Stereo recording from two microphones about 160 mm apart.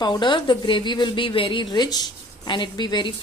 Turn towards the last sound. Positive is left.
turn(degrees=30)  # may be behind; listen again after turning